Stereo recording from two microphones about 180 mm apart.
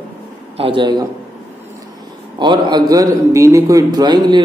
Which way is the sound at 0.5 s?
30° right (ahead or behind).